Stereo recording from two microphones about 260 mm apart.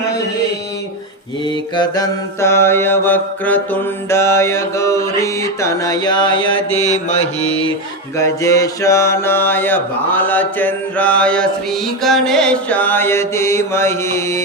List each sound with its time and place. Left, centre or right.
1.5 s mantra: centre
8.1 s mantra: centre